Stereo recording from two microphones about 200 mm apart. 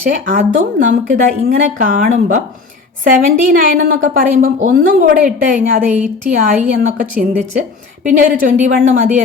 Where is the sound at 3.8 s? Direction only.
45° right (ahead or behind).